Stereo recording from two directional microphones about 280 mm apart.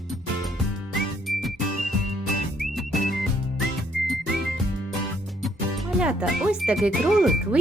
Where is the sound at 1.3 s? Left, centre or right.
Centre.